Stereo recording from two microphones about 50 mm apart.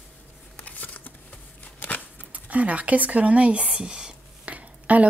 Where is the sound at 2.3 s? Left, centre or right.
Right.